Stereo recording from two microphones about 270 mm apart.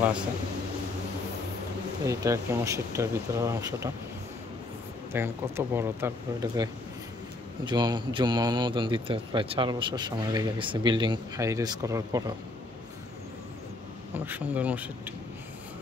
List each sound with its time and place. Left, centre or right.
2.0 s a man's voice: centre
5.1 s a man's voice: centre
14.1 s speech: centre